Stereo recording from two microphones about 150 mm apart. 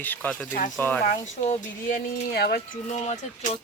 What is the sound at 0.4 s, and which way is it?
Speech, 60° left (ahead or behind).